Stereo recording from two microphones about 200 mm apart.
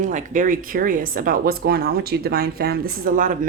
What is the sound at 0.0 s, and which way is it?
A woman's voice, 40° right (ahead or behind).